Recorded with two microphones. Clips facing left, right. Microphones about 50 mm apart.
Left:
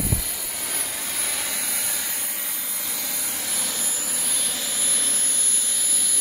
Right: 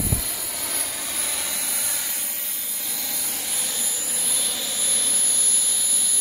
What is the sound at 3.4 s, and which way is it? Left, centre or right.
Vehicle, left.